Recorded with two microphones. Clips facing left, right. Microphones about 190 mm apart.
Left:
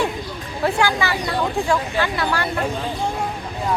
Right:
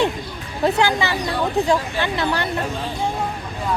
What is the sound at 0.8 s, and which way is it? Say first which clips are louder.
Speech: right 1 dB; 20° right (ahead or behind).